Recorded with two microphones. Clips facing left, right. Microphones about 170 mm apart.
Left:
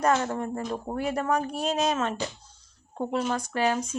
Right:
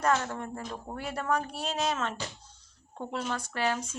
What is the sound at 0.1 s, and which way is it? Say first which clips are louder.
Speech: left 3 dB; 35° left (ahead or behind).